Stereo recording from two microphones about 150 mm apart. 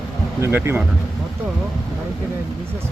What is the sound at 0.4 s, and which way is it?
Speech, 15° right (ahead or behind).